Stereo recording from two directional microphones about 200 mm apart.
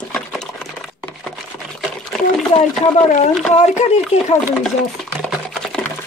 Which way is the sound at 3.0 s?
40° left (ahead or behind).